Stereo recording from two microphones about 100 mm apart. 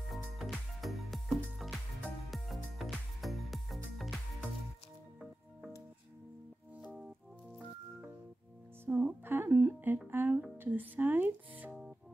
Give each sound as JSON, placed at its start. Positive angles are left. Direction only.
{"t": 0.0, "sound": "music", "side_deg": 0}
{"t": 8.8, "sound": "speech", "side_deg": -20}